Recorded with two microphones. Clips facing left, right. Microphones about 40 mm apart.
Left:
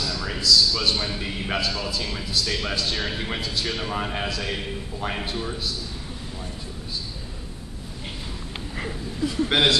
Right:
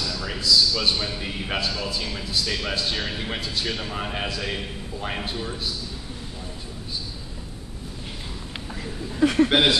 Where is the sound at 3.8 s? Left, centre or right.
Centre.